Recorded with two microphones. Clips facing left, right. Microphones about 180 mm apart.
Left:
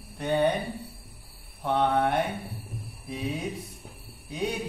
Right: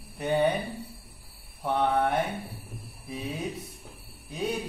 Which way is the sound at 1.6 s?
10° right (ahead or behind).